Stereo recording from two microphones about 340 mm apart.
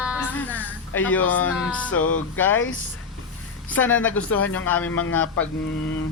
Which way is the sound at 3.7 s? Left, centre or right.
Centre.